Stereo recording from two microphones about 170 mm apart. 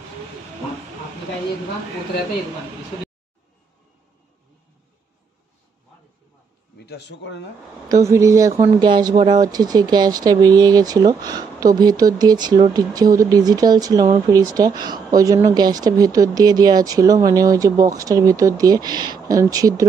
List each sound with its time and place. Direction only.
6.8 s a man's voice: 80° left
7.9 s speech: 20° right (ahead or behind)